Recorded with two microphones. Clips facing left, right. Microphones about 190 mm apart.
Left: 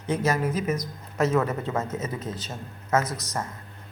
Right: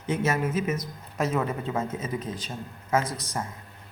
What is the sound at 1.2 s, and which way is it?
A man's voice, 10° right (ahead or behind).